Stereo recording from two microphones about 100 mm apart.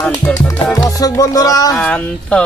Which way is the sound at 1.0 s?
35° left (ahead or behind).